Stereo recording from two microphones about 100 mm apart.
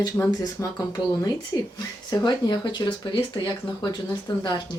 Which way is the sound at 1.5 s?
40° left (ahead or behind).